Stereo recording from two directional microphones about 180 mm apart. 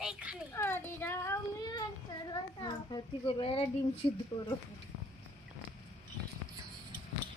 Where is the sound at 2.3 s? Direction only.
25° left (ahead or behind).